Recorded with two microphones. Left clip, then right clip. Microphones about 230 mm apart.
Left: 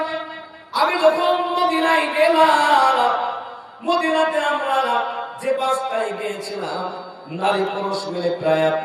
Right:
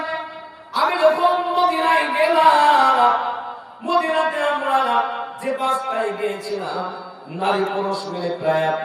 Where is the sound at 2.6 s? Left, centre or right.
Centre.